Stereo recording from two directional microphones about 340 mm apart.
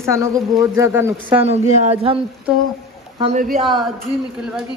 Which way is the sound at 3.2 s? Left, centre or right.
Right.